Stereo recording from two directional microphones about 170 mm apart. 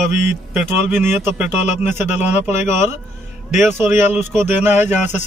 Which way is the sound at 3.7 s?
10° right (ahead or behind).